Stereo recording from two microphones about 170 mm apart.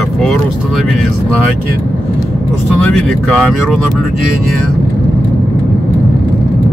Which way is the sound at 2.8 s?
Centre (ahead or behind).